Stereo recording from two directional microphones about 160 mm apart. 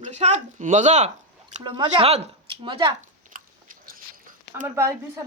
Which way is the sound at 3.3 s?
60° right (ahead or behind).